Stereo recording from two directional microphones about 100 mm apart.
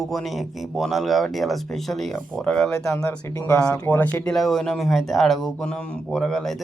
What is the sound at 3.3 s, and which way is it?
Speech, 30° left (ahead or behind).